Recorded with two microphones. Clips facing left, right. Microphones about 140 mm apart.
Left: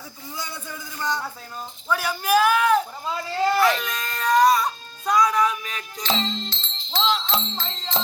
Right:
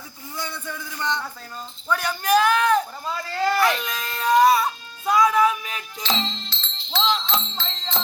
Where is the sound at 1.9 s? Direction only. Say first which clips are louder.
Right 1 dB; 5° left (ahead or behind).